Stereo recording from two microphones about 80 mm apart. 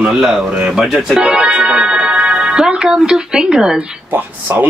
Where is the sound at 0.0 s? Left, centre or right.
Centre.